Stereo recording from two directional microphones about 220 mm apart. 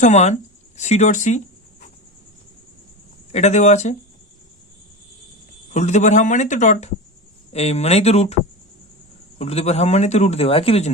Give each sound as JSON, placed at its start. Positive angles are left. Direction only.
{"t": 0.0, "sound": "speech", "side_deg": 30}
{"t": 3.3, "sound": "speech", "side_deg": 30}
{"t": 5.7, "sound": "a man's voice", "side_deg": 30}
{"t": 9.4, "sound": "a man's voice", "side_deg": 30}